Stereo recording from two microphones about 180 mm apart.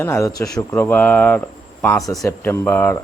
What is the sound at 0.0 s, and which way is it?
Speech, 15° left (ahead or behind).